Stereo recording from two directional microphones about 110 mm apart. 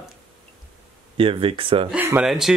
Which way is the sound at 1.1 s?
55° right (ahead or behind).